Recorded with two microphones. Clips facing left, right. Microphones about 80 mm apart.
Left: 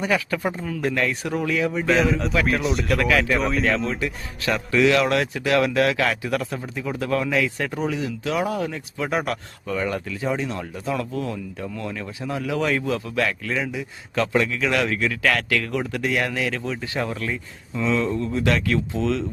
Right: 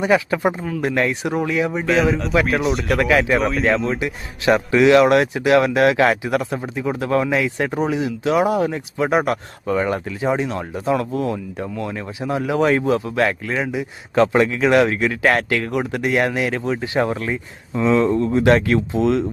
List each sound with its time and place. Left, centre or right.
0.0 s speech: right
0.6 s speech: centre
2.4 s speech: centre
4.4 s speech: right